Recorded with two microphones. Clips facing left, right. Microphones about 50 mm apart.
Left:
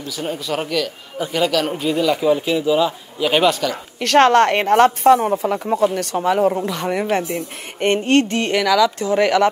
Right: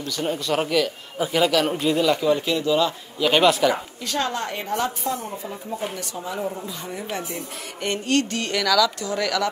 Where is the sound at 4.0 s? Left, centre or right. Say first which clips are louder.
Left 14 dB; left.